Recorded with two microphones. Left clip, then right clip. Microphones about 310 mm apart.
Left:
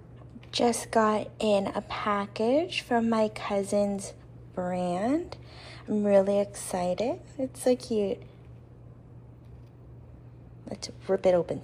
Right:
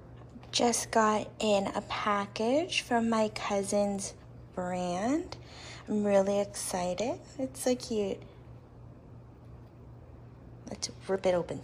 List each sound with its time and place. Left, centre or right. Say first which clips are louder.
0.5 s a woman's voice: left 2 dB; centre
10.6 s a woman's voice: even; centre